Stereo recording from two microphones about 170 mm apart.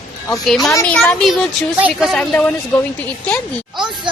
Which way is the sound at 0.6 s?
15° left (ahead or behind).